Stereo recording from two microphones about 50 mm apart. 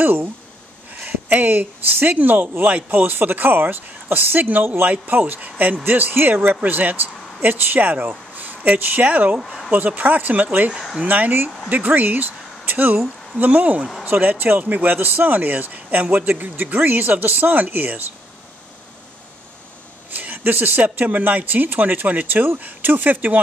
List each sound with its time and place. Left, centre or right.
0.0 s speech: right
9.4 s speech: centre
9.7 s speech: right
14.0 s speech: right
20.2 s speech: right